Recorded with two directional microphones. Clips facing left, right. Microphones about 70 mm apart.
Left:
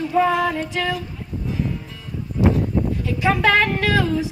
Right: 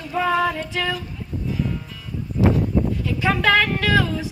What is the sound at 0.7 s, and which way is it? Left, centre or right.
Speech, left.